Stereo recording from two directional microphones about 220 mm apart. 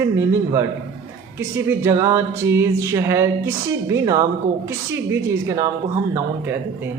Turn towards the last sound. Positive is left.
turn(degrees=-10)  # may be behind; listen again after turning